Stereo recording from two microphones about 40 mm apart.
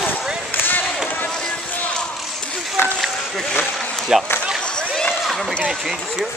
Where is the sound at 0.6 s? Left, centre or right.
Left.